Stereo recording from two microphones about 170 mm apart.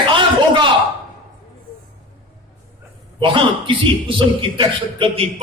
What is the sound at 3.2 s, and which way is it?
A man's voice, 30° right (ahead or behind).